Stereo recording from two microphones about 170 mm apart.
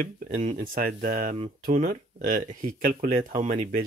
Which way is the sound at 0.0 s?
50° right (ahead or behind).